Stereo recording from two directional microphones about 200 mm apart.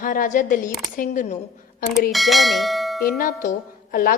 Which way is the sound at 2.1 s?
Centre (ahead or behind).